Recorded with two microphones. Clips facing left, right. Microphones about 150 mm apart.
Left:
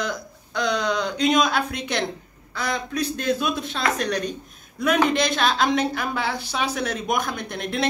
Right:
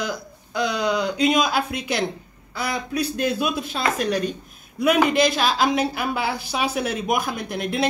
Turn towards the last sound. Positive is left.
turn(degrees=-5)  # may be behind; listen again after turning